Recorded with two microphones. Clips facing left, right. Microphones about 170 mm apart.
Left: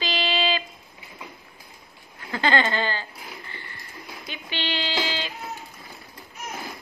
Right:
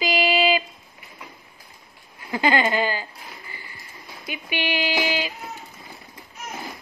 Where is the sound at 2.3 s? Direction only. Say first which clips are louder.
Right 2 dB; 10° right (ahead or behind).